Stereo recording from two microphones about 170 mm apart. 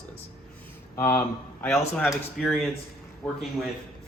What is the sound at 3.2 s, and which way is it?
Speech, 5° left (ahead or behind).